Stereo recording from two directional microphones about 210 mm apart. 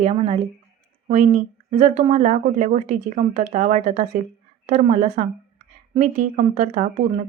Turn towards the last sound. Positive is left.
turn(degrees=-35)  # may be behind; listen again after turning